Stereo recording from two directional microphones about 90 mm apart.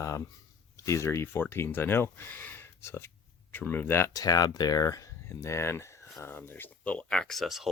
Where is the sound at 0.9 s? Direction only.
35° left (ahead or behind).